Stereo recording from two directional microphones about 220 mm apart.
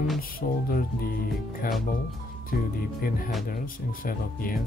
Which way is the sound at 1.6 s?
40° left (ahead or behind).